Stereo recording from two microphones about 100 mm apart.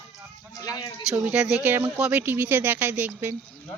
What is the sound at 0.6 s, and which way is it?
Speech, 40° left (ahead or behind).